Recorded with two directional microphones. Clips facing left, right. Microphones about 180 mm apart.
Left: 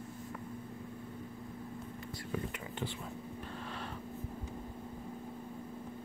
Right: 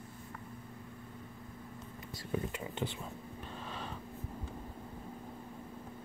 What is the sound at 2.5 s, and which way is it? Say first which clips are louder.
Whispering: right 2 dB; 25° right (ahead or behind).